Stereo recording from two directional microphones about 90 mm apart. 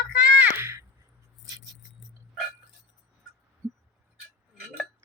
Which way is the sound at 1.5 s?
45° right (ahead or behind).